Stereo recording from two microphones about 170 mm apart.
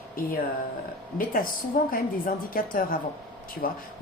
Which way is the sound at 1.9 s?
55° left (ahead or behind).